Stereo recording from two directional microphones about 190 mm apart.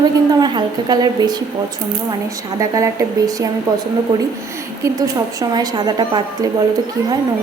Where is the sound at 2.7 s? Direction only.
15° right (ahead or behind).